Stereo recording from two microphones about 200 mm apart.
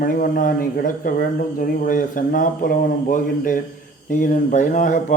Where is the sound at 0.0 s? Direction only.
45° left (ahead or behind).